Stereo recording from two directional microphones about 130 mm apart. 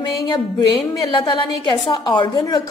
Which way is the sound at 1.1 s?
40° left (ahead or behind).